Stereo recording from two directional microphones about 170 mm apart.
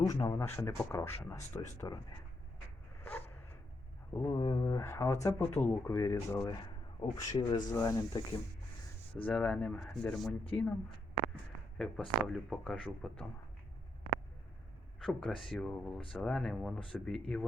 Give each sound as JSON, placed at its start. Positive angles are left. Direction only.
{"t": 0.0, "sound": "speech", "side_deg": 20}
{"t": 3.0, "sound": "a sound", "side_deg": 10}
{"t": 4.1, "sound": "speech", "side_deg": 15}
{"t": 9.2, "sound": "speech", "side_deg": 5}
{"t": 11.8, "sound": "speech", "side_deg": 0}
{"t": 14.9, "sound": "speech", "side_deg": 5}